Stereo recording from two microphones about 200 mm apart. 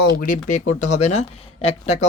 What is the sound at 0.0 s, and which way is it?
Speech, 45° left (ahead or behind).